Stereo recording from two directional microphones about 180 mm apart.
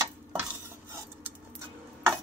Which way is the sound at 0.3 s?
10° right (ahead or behind).